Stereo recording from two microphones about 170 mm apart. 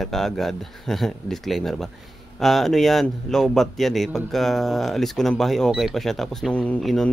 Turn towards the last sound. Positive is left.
turn(degrees=5)  # may be behind; listen again after turning